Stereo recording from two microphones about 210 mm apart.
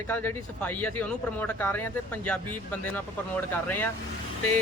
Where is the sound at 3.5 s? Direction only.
10° left (ahead or behind).